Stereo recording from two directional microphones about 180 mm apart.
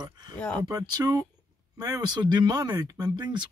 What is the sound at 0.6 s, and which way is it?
Speech, 20° right (ahead or behind).